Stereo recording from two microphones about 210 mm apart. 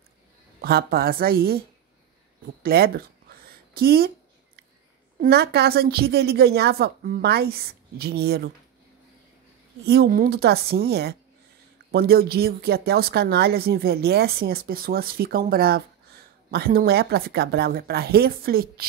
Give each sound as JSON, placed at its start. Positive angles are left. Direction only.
{"t": 0.6, "sound": "speech", "side_deg": -50}
{"t": 2.6, "sound": "a sound", "side_deg": -45}
{"t": 5.2, "sound": "speech", "side_deg": -50}
{"t": 9.8, "sound": "speech", "side_deg": -45}